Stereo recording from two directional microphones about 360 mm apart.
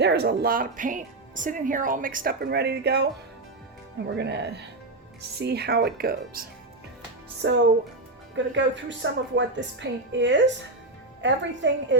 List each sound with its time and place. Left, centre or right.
0.0 s speech: right
4.1 s a woman's voice: right